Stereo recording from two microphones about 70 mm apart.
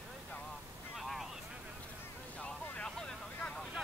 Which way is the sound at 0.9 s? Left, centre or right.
Centre.